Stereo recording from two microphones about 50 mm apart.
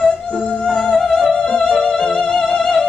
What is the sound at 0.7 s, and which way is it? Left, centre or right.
Music, centre.